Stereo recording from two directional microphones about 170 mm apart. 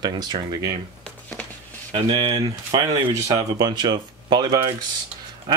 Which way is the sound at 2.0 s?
25° right (ahead or behind).